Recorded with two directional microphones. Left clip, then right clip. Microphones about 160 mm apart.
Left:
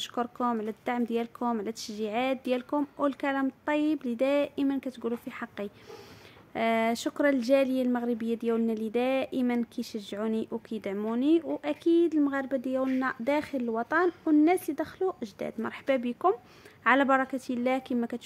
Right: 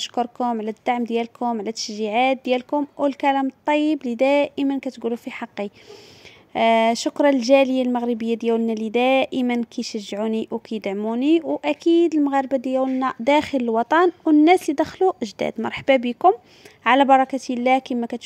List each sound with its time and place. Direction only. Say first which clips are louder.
0.0 s speech: right 7 dB; 30° right (ahead or behind)